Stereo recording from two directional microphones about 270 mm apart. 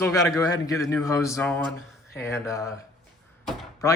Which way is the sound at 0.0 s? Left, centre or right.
Centre.